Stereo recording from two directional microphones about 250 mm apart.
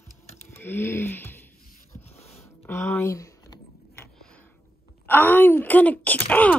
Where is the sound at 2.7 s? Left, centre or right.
Centre.